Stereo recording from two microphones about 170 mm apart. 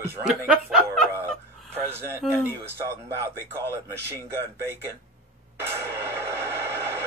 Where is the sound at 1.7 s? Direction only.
15° right (ahead or behind).